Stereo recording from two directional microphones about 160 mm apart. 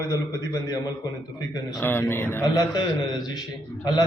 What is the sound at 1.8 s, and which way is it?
Speech, 10° left (ahead or behind).